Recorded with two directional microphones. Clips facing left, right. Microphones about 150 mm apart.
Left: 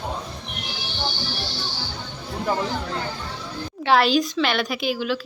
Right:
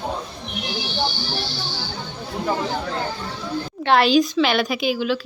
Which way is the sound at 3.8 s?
Centre (ahead or behind).